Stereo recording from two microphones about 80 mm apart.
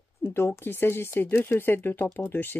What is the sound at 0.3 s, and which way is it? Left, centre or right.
Speech, left.